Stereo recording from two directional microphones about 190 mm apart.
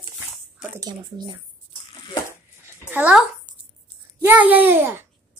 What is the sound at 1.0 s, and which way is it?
Speech, 25° right (ahead or behind).